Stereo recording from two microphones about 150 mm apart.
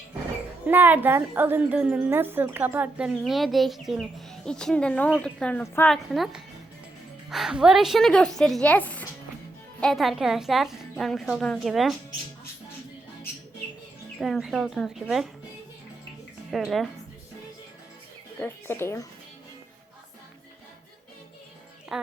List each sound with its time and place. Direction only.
0.7 s a woman's voice: 10° right (ahead or behind); by 9.0 s 10° left (ahead or behind)
9.8 s a woman's voice: centre (ahead or behind)
14.2 s a woman's voice: centre (ahead or behind)
16.5 s a woman's voice: centre (ahead or behind)
18.3 s speech: 15° left (ahead or behind)